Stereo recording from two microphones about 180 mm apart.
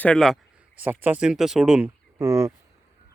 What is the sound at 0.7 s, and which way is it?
Speech, 10° right (ahead or behind).